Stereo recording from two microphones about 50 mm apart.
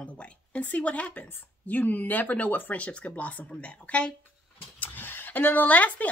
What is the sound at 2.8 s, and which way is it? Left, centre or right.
Speech, left.